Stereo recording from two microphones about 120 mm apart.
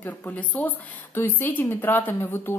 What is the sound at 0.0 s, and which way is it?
A woman's voice, 15° left (ahead or behind).